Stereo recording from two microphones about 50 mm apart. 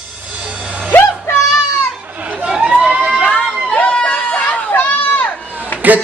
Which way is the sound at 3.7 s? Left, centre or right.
Left.